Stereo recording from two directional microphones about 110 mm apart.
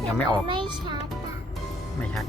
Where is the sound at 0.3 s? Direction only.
45° right (ahead or behind).